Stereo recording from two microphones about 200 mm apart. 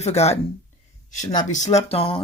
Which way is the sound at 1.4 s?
35° left (ahead or behind).